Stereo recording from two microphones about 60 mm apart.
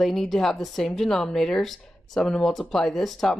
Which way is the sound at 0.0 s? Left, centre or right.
Centre.